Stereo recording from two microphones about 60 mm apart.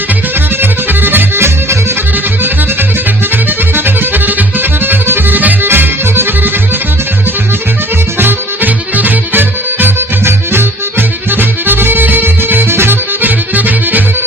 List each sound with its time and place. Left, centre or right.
0.6 s music: right
3.8 s music: right
8.2 s music: right